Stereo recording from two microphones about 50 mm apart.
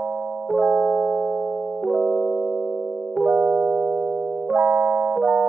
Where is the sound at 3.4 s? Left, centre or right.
Right.